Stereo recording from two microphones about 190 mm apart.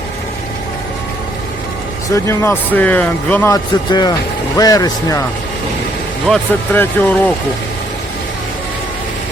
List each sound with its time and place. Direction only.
2.1 s speech: 15° left (ahead or behind)
3.5 s speech: 20° left (ahead or behind)
6.2 s speech: 5° left (ahead or behind)